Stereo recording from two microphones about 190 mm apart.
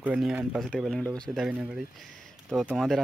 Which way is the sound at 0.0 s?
5° right (ahead or behind).